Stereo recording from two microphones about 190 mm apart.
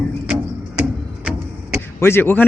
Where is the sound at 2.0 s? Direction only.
10° left (ahead or behind).